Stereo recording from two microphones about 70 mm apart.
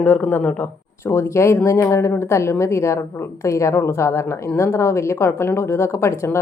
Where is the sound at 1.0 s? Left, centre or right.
Left.